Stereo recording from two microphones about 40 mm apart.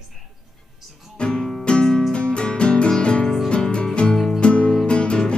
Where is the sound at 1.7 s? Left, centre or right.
Left.